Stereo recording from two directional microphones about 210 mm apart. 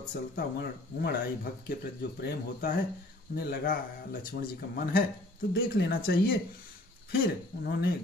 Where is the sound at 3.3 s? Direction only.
45° left (ahead or behind).